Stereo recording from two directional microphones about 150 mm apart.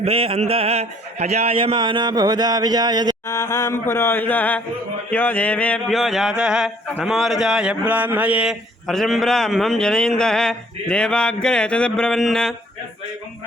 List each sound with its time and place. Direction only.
0.0 s speech: 40° right (ahead or behind)
3.2 s mantra: 20° left (ahead or behind)
5.1 s a man's voice: 10° left (ahead or behind)